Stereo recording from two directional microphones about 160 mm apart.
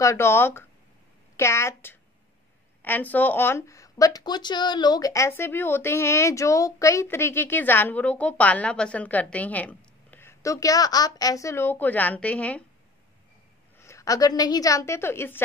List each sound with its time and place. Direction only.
0.0 s a woman's voice: 15° left (ahead or behind)
13.7 s a woman's voice: 15° left (ahead or behind)